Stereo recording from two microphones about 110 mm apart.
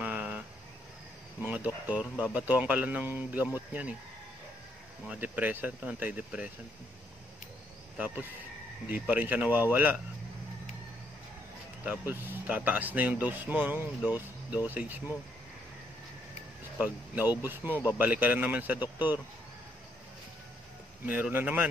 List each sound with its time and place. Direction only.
0.0 s a sound: 15° right (ahead or behind)
1.4 s speech: 15° right (ahead or behind)
5.0 s speech: 15° right (ahead or behind)
8.8 s speech: 15° right (ahead or behind)
11.8 s speech: 15° right (ahead or behind)
16.8 s speech: 15° right (ahead or behind)
21.0 s speech: 15° right (ahead or behind)